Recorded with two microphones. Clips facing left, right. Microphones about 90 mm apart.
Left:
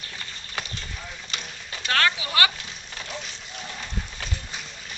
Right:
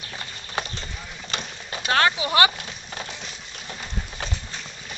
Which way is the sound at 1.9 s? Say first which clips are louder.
Right 3 dB; 25° right (ahead or behind).